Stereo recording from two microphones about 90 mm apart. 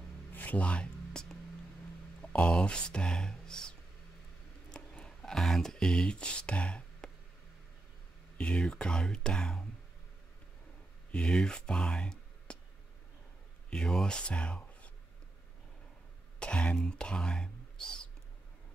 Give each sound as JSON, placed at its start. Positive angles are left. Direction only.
{"t": 0.3, "sound": "music", "side_deg": 20}
{"t": 2.2, "sound": "speech", "side_deg": 15}
{"t": 4.6, "sound": "a sound", "side_deg": 10}
{"t": 8.4, "sound": "speech", "side_deg": 10}
{"t": 11.1, "sound": "speech", "side_deg": 10}
{"t": 13.7, "sound": "speech", "side_deg": 10}
{"t": 16.3, "sound": "speech", "side_deg": 15}